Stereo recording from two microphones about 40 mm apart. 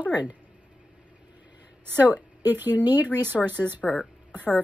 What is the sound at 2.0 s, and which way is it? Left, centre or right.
Speech, right.